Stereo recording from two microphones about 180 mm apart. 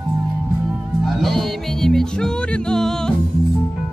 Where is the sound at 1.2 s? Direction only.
Centre (ahead or behind).